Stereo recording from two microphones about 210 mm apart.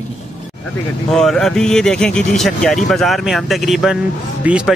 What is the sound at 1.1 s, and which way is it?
Speech, centre (ahead or behind).